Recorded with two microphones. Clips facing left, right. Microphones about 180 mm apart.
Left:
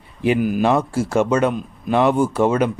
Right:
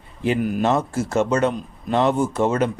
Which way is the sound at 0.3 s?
5° left (ahead or behind).